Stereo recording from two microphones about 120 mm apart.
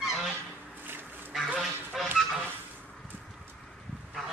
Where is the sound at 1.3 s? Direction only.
Centre (ahead or behind).